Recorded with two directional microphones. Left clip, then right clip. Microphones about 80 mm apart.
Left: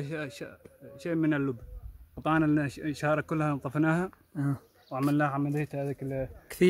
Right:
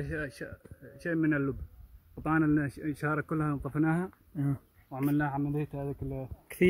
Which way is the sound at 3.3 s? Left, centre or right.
Left.